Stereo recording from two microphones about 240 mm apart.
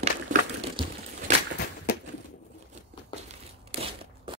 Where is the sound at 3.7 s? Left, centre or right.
Right.